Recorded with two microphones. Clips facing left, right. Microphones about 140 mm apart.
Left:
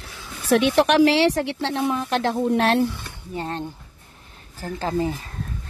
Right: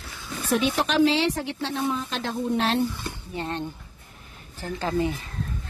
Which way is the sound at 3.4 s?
35° left (ahead or behind).